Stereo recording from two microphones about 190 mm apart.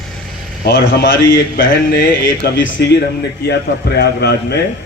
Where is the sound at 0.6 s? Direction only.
55° left (ahead or behind).